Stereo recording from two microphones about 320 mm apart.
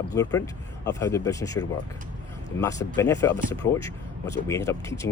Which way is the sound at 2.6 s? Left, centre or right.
Centre.